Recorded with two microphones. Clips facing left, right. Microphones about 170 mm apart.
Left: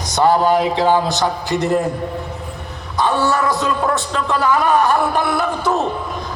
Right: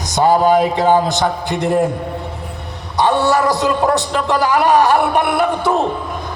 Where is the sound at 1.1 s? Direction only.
50° right (ahead or behind).